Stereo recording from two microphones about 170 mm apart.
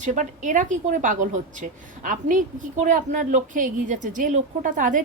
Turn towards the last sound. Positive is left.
turn(degrees=-50)  # may be behind; listen again after turning